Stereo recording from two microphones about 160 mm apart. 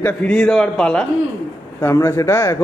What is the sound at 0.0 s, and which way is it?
A man's voice, 5° left (ahead or behind).